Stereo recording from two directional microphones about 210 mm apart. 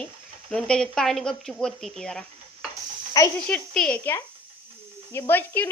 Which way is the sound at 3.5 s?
5° left (ahead or behind).